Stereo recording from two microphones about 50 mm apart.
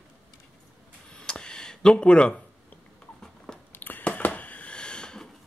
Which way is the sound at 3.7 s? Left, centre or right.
Left.